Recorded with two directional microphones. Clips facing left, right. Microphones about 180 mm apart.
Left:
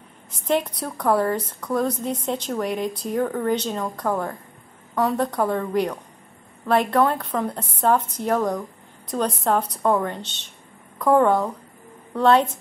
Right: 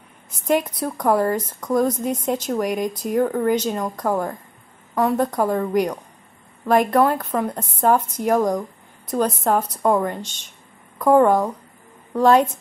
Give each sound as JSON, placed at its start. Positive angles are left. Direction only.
{"t": 0.5, "sound": "a woman's voice", "side_deg": -10}